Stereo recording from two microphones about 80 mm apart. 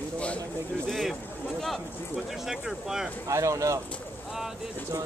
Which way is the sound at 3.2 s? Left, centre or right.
Right.